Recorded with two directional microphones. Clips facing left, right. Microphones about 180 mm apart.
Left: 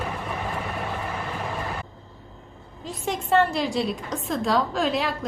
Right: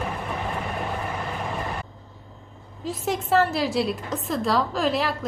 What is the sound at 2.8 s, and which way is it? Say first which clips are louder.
A woman's voice: right 2 dB; centre (ahead or behind).